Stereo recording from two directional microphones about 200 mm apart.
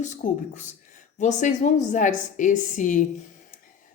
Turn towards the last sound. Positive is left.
turn(degrees=40)  # may be behind; listen again after turning